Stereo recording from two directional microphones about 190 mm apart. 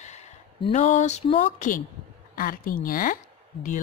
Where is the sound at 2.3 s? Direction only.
50° left (ahead or behind).